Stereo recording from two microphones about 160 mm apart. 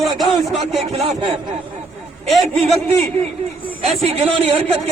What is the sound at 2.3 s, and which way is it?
Speech, centre (ahead or behind).